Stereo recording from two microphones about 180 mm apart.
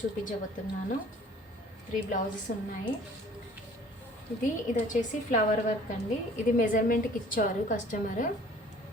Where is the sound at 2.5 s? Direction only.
45° left (ahead or behind).